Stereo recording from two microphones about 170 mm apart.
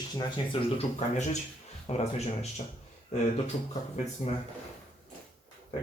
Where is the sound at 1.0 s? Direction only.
40° left (ahead or behind).